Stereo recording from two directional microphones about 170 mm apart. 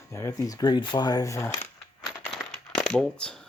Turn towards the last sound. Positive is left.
turn(degrees=5)  # may be behind; listen again after turning